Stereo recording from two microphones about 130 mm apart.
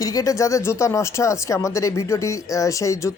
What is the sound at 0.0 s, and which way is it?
A woman's voice, 25° left (ahead or behind).